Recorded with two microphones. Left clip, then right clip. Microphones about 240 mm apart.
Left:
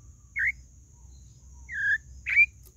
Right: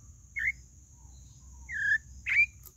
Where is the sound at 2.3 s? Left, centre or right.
Centre.